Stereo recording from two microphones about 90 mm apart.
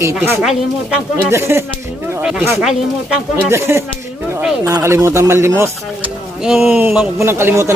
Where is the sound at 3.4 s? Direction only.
30° right (ahead or behind).